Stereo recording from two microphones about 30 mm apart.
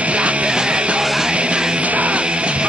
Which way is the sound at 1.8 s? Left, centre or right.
Right.